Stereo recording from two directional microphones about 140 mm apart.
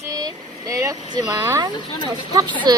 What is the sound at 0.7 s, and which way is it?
Speech, 25° right (ahead or behind).